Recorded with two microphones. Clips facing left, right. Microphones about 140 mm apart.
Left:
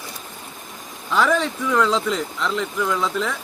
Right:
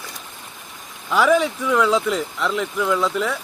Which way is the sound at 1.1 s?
10° right (ahead or behind).